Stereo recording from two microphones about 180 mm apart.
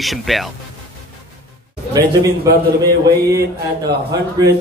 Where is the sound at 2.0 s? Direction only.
20° right (ahead or behind).